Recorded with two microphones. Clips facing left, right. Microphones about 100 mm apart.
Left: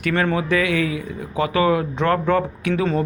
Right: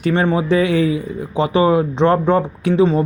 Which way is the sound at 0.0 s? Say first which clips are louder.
Right 4 dB; 20° right (ahead or behind).